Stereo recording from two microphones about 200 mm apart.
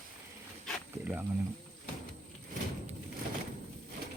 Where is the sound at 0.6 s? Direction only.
5° right (ahead or behind).